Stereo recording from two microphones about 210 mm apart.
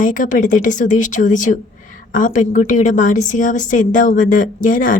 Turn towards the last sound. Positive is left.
turn(degrees=40)  # may be behind; listen again after turning